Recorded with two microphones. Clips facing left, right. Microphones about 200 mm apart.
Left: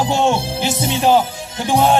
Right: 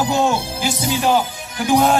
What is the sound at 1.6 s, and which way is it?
Speech, 30° left (ahead or behind).